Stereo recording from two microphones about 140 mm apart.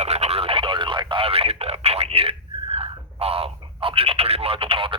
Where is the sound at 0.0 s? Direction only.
50° right (ahead or behind).